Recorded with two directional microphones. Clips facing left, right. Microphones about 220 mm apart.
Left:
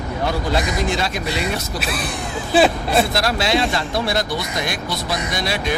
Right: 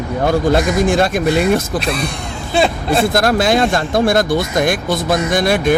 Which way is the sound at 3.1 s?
50° right (ahead or behind).